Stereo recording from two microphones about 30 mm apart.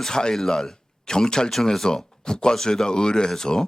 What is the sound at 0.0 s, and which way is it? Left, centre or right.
Speech, left.